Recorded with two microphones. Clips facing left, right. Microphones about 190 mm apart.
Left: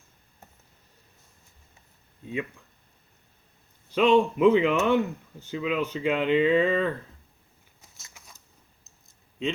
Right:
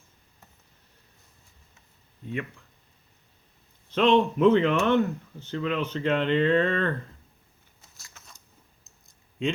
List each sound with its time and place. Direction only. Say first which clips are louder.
2.2 s speech: left 1 dB; 15° left (ahead or behind)
3.9 s speech: left 1 dB; 10° left (ahead or behind)
7.9 s a sound: even; 20° left (ahead or behind)
8.8 s clicking: even; centre (ahead or behind)